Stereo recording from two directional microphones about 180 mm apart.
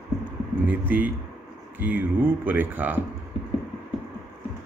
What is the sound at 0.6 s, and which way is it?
Speech, 10° right (ahead or behind).